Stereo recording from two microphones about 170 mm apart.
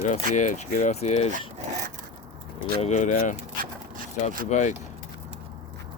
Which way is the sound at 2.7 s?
40° left (ahead or behind).